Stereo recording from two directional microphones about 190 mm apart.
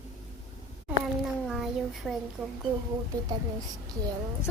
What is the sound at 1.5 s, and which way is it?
Speech, centre (ahead or behind).